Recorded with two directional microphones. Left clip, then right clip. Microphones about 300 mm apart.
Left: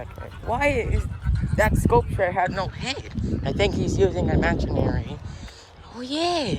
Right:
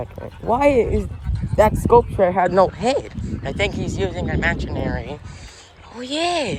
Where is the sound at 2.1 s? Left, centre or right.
Left.